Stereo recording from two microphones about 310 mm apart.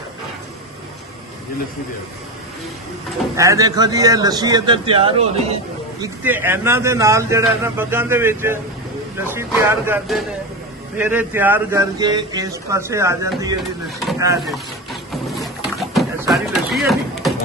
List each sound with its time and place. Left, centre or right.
3.3 s a man's voice: centre
6.0 s a man's voice: centre
14.4 s a sound: centre